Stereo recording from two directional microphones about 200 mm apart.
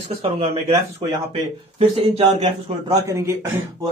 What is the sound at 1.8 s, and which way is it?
Speech, 30° right (ahead or behind).